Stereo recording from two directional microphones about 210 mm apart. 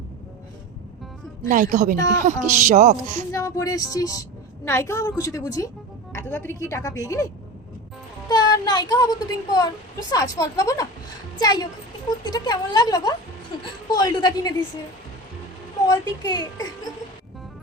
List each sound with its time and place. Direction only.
1.5 s a woman's voice: 40° right (ahead or behind)
3.3 s a woman's voice: 15° left (ahead or behind)
8.3 s a child's voice: 20° left (ahead or behind)
15.9 s a woman's voice: 20° left (ahead or behind)